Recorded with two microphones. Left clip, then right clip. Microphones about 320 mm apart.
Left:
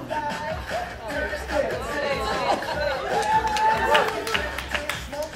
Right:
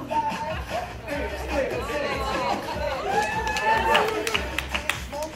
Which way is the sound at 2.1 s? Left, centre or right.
Left.